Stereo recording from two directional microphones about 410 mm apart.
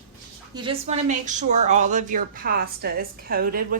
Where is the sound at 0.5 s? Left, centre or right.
Centre.